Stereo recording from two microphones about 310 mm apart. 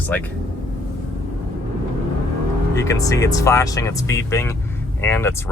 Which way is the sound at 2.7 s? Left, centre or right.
Centre.